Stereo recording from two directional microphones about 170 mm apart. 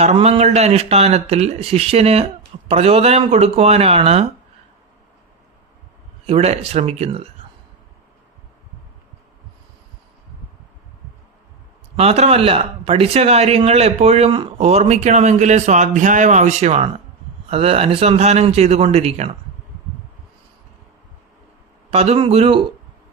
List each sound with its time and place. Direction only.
0.0 s speech: 40° right (ahead or behind)
6.2 s speech: 35° right (ahead or behind)
11.9 s speech: 40° right (ahead or behind)
21.8 s speech: 35° right (ahead or behind)